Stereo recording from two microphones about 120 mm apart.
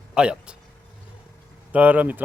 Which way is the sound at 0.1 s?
10° right (ahead or behind).